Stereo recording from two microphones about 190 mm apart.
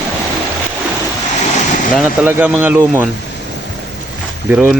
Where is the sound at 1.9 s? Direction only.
10° right (ahead or behind).